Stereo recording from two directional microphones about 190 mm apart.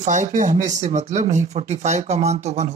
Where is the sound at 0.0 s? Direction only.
40° right (ahead or behind).